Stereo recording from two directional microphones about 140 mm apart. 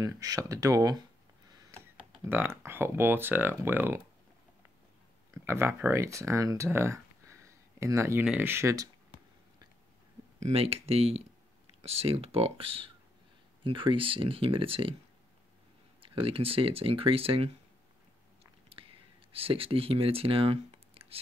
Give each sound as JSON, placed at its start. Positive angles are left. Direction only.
{"t": 0.0, "sound": "speech", "side_deg": -25}
{"t": 1.7, "sound": "speech", "side_deg": -15}
{"t": 5.3, "sound": "speech", "side_deg": -20}
{"t": 10.4, "sound": "speech", "side_deg": -45}
{"t": 16.0, "sound": "speech", "side_deg": -40}
{"t": 19.3, "sound": "speech", "side_deg": -40}